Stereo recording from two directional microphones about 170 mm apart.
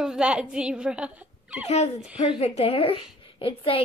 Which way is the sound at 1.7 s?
35° left (ahead or behind).